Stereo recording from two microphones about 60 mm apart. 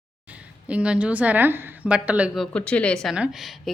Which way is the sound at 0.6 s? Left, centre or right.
Centre.